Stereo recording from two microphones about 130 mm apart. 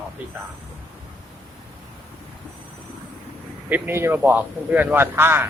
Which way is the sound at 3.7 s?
20° right (ahead or behind).